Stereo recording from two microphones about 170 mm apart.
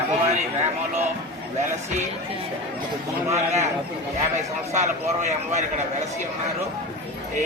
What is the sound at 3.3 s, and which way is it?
Speech, 45° right (ahead or behind).